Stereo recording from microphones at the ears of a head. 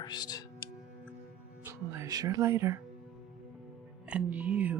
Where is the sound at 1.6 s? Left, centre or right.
Right.